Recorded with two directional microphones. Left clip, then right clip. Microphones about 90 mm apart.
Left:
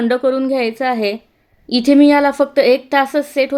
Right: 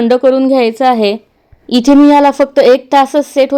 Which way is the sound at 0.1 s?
35° right (ahead or behind).